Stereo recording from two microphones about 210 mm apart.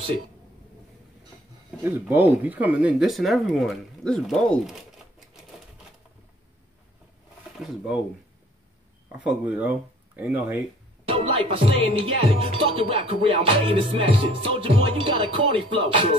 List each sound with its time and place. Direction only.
1.8 s speech: 10° right (ahead or behind)
7.5 s speech: centre (ahead or behind)
9.4 s speech: 10° right (ahead or behind)
11.1 s music: 25° right (ahead or behind)